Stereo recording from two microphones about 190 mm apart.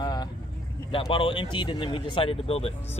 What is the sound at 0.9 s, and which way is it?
Speech, 25° left (ahead or behind).